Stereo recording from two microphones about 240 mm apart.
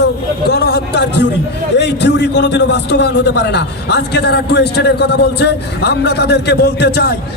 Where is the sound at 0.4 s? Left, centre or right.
Left.